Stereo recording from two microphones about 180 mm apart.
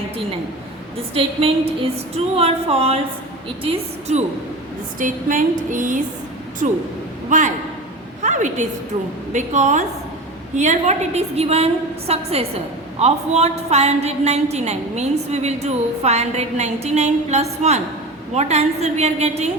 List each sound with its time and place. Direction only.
1.1 s a woman's voice: 30° right (ahead or behind)
4.9 s a woman's voice: 45° right (ahead or behind)
8.2 s a sound: 40° right (ahead or behind)
9.3 s a woman's voice: 40° right (ahead or behind)